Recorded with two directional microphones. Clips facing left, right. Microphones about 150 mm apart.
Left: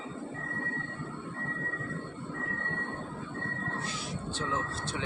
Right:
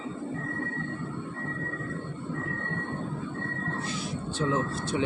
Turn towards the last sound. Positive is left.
turn(degrees=-15)  # may be behind; listen again after turning